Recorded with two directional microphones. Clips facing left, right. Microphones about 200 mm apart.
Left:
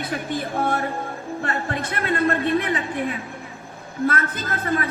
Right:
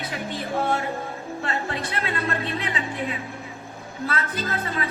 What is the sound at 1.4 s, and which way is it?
A woman's voice, 50° left (ahead or behind).